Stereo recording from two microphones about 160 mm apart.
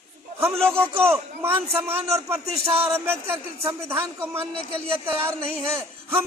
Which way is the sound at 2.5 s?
40° right (ahead or behind).